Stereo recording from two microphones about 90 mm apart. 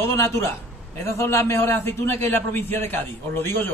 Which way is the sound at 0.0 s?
30° left (ahead or behind).